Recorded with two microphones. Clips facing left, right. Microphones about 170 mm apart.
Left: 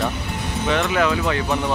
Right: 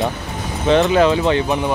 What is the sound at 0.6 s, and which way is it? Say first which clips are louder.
Speech: right 7 dB; 35° right (ahead or behind).